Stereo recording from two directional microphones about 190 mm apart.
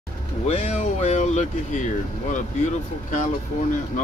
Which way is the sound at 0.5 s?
35° left (ahead or behind).